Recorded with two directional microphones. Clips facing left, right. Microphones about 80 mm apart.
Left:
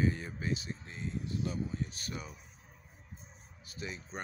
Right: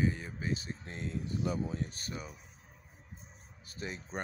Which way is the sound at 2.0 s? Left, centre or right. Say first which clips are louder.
Even; right.